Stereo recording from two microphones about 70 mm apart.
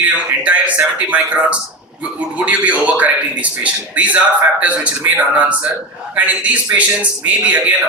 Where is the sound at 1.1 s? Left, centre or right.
Centre.